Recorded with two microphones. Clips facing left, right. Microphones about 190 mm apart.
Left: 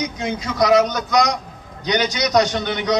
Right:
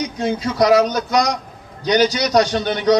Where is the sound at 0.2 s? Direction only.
35° right (ahead or behind).